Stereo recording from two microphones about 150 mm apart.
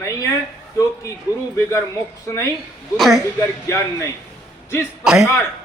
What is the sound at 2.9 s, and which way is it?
Speech, centre (ahead or behind).